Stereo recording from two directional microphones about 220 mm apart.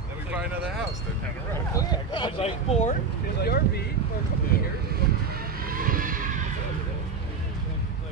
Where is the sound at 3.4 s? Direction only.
45° left (ahead or behind).